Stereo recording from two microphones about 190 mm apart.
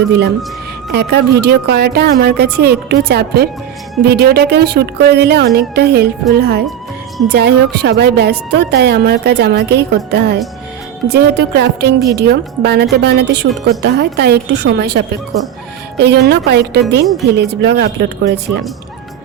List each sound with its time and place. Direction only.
0.9 s a woman's voice: 60° right (ahead or behind)